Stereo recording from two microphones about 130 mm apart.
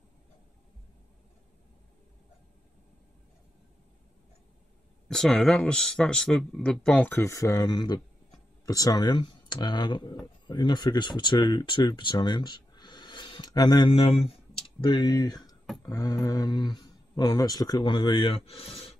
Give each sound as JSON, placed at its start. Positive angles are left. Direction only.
{"t": 5.0, "sound": "speech", "side_deg": 5}
{"t": 14.8, "sound": "speech", "side_deg": 35}